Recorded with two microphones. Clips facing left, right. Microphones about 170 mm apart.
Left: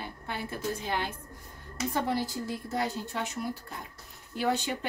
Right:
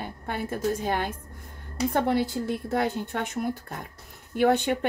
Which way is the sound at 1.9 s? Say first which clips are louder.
Right 5 dB; 60° right (ahead or behind).